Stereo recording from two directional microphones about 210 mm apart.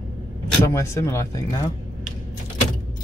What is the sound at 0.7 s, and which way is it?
Speech, 15° left (ahead or behind).